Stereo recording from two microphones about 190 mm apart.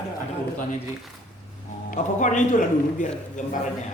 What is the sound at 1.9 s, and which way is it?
A man's voice, 40° left (ahead or behind).